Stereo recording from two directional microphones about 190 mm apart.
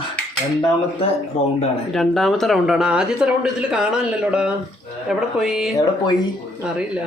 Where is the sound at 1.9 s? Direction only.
Centre (ahead or behind).